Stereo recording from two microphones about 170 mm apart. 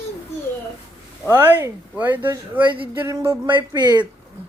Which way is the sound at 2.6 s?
30° right (ahead or behind).